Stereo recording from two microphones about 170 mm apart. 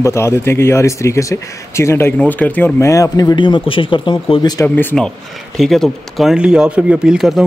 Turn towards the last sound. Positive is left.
turn(degrees=0)  # may be behind; listen again after turning